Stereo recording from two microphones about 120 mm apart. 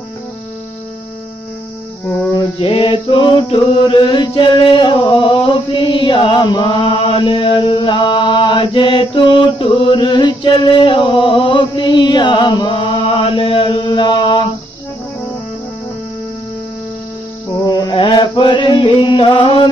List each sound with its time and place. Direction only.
2.6 s mantra: 45° left (ahead or behind)
17.6 s mantra: 35° left (ahead or behind)